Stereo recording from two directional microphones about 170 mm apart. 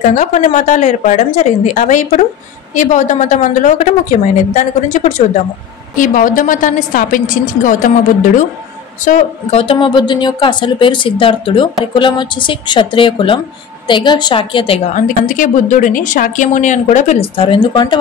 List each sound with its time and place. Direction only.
0.1 s speech: 50° left (ahead or behind)
5.9 s speech: 50° left (ahead or behind)
9.0 s a woman's voice: 40° left (ahead or behind)
15.0 s speech: 50° left (ahead or behind); by 17.9 s 25° left (ahead or behind)